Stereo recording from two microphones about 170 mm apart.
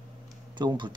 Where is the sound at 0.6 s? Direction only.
25° right (ahead or behind).